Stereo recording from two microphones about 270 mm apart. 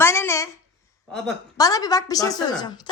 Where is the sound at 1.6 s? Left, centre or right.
Centre.